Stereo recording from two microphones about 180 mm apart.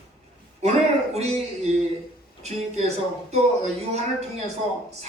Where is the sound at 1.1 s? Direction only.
35° right (ahead or behind).